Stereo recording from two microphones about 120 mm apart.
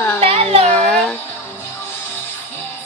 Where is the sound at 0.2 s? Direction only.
55° right (ahead or behind).